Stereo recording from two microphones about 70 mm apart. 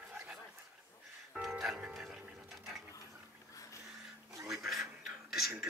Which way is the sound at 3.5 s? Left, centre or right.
Left.